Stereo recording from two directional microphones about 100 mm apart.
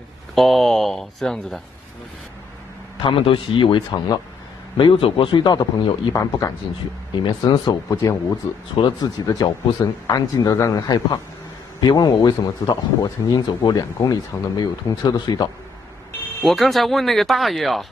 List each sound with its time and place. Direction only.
0.3 s speech: centre (ahead or behind)
3.0 s speech: 55° left (ahead or behind)
4.7 s speech: 60° left (ahead or behind)
9.2 s speech: 40° left (ahead or behind)
16.3 s speech: centre (ahead or behind)